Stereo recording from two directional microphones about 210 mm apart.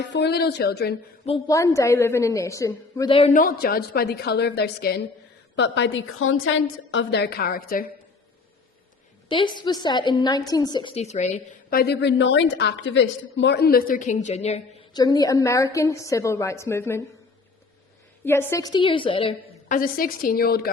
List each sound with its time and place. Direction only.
0.0 s a woman's voice: 55° left (ahead or behind)
1.5 s a woman's voice: 15° left (ahead or behind)
3.2 s a woman's voice: 35° left (ahead or behind)
9.3 s a woman's voice: 20° left (ahead or behind)
14.9 s a woman's voice: 15° left (ahead or behind)
18.3 s a woman's voice: 10° left (ahead or behind)
19.6 s a woman's voice: 40° left (ahead or behind)